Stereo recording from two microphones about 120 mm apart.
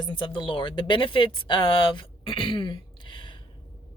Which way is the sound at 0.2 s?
45° left (ahead or behind).